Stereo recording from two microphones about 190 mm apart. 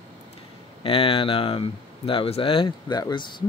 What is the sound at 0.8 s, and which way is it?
Speech, 30° left (ahead or behind).